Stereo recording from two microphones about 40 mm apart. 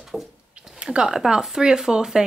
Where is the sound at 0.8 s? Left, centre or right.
Right.